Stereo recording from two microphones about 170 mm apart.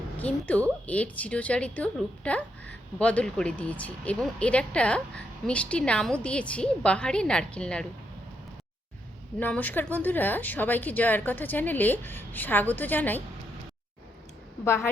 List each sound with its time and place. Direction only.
0.2 s a woman's voice: 10° left (ahead or behind)
9.4 s a woman's voice: 10° left (ahead or behind)
14.6 s a woman's voice: 15° left (ahead or behind)